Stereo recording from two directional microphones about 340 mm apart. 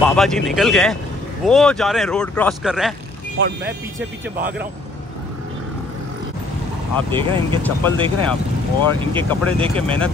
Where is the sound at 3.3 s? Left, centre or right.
Right.